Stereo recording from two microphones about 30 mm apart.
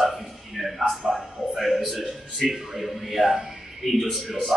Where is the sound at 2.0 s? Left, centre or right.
Centre.